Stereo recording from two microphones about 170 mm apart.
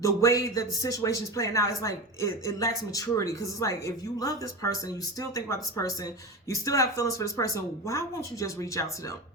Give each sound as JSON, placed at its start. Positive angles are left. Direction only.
{"t": 0.0, "sound": "speech", "side_deg": 20}